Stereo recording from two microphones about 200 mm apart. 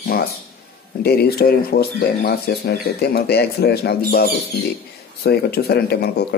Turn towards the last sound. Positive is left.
turn(degrees=55)  # may be behind; listen again after turning